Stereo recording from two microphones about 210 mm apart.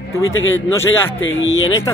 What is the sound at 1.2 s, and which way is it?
Speech, 65° left (ahead or behind).